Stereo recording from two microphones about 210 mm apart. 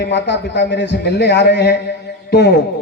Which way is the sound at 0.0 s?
55° left (ahead or behind).